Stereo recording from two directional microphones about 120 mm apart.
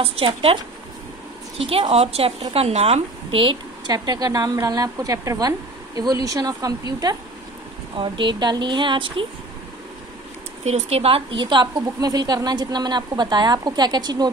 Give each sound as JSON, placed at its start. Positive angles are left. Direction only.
{"t": 0.0, "sound": "a woman's voice", "side_deg": -50}
{"t": 1.7, "sound": "a woman's voice", "side_deg": -55}
{"t": 10.6, "sound": "a woman's voice", "side_deg": -65}